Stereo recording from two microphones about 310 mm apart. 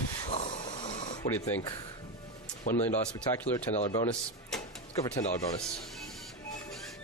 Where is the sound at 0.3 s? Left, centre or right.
Centre.